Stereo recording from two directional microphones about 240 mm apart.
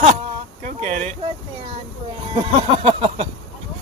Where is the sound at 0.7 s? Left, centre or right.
Right.